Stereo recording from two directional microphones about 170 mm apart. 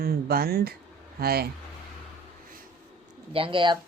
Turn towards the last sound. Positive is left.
turn(degrees=-30)  # may be behind; listen again after turning